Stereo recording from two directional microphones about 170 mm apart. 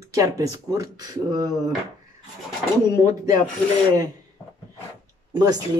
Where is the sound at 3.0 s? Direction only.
20° right (ahead or behind).